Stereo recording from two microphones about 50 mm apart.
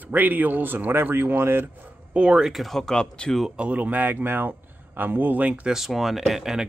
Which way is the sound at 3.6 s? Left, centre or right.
Right.